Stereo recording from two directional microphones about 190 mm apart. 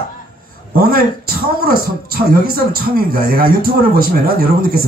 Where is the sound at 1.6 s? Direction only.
50° right (ahead or behind).